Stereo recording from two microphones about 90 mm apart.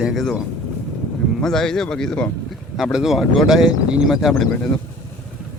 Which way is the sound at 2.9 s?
5° right (ahead or behind).